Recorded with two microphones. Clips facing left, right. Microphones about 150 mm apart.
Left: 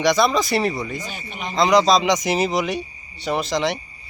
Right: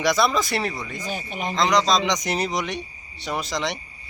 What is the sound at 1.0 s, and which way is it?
Speech, 45° right (ahead or behind).